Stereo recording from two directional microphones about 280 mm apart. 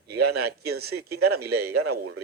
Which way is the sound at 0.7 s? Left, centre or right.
Right.